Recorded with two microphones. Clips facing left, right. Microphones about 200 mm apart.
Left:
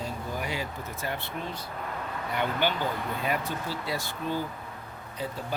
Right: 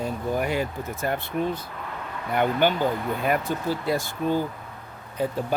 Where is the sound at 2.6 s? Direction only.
50° right (ahead or behind).